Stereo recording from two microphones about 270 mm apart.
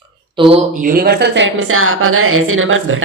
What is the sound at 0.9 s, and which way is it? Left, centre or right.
A woman's voice, right.